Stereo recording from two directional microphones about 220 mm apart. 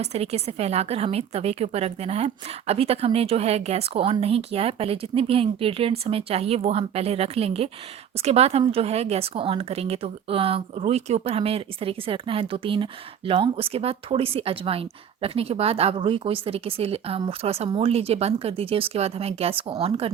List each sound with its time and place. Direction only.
0.0 s a woman's voice: 30° right (ahead or behind)